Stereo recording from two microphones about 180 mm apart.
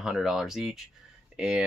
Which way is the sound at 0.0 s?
Centre (ahead or behind).